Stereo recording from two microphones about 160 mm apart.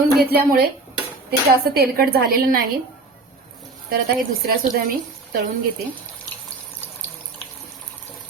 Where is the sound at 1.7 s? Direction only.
70° right (ahead or behind).